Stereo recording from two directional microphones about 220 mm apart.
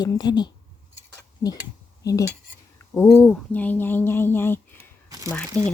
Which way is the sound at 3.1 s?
10° left (ahead or behind).